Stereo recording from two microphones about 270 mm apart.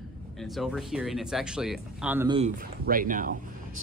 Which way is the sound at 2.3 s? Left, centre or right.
Right.